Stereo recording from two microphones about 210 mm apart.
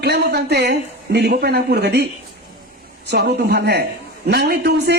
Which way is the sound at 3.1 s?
50° right (ahead or behind).